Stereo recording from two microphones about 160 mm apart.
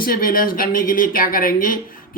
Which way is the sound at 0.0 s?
65° left (ahead or behind).